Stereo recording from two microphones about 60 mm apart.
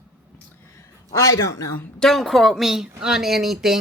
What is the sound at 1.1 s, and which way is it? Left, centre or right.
Speech, left.